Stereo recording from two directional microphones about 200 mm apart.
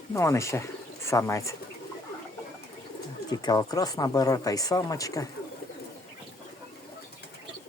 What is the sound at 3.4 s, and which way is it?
Speech, 20° left (ahead or behind).